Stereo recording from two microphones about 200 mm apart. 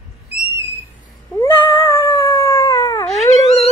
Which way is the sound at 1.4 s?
25° left (ahead or behind).